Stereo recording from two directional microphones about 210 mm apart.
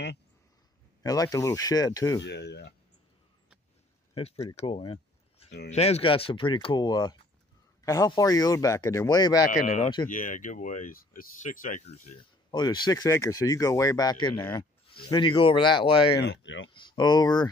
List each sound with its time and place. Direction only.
1.0 s speech: 15° left (ahead or behind)
2.2 s speech: 55° left (ahead or behind)
4.1 s speech: 30° left (ahead or behind)
9.5 s speech: 35° left (ahead or behind)
12.4 s speech: 20° left (ahead or behind)
14.9 s speech: 25° left (ahead or behind)
16.2 s speech: 60° left (ahead or behind)
16.7 s speech: 20° left (ahead or behind)